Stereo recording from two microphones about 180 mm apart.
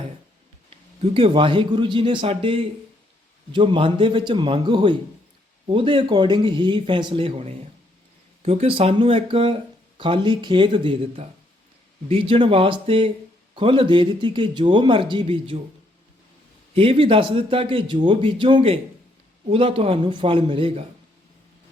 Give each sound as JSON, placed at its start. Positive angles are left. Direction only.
{"t": 0.7, "sound": "a man's voice", "side_deg": -30}
{"t": 12.3, "sound": "a man's voice", "side_deg": -30}
{"t": 16.7, "sound": "a man's voice", "side_deg": -30}